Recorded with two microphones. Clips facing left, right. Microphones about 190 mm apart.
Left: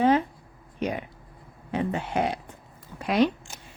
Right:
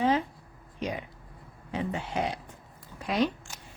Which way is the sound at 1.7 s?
55° left (ahead or behind).